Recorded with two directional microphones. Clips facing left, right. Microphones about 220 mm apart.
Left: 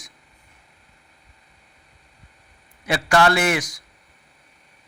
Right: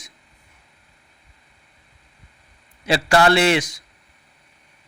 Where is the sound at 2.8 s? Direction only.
30° right (ahead or behind).